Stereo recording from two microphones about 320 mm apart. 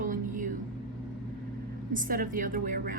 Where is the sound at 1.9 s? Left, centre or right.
Right.